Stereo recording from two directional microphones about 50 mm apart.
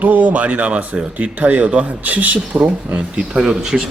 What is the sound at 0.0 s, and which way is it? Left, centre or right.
Speech, right.